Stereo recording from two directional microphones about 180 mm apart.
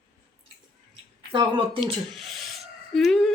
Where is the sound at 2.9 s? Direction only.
5° left (ahead or behind).